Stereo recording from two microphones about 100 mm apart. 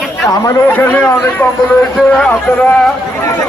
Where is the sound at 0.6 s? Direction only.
15° left (ahead or behind).